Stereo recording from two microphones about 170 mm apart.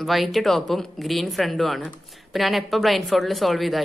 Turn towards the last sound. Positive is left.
turn(degrees=0)  # may be behind; listen again after turning